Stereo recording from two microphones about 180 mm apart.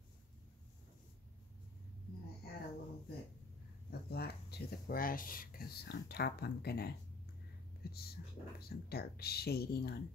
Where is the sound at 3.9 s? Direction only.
60° left (ahead or behind).